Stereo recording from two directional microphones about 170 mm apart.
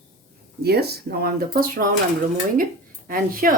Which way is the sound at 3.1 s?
55° right (ahead or behind).